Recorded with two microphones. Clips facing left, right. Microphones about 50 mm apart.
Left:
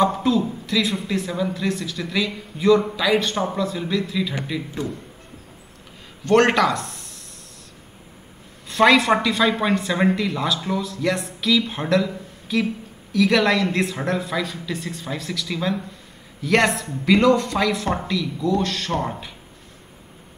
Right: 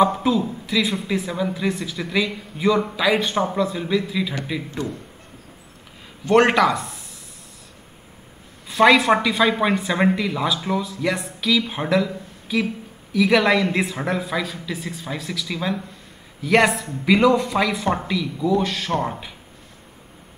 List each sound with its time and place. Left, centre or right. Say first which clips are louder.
0.0 s speech: right 1 dB; centre
6.2 s speech: right 1 dB; centre
8.6 s speech: right 1 dB; centre